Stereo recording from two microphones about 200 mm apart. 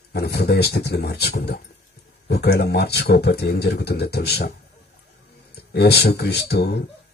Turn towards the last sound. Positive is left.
turn(degrees=55)  # may be behind; listen again after turning